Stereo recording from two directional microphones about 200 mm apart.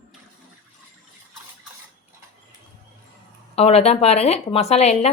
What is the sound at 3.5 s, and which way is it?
A woman's voice, 30° left (ahead or behind).